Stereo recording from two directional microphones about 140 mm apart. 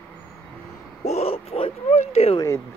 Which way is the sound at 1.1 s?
45° left (ahead or behind).